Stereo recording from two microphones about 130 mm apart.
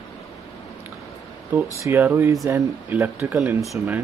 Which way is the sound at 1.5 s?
20° right (ahead or behind).